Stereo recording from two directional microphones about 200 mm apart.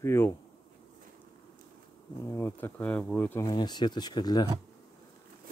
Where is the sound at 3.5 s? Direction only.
20° left (ahead or behind).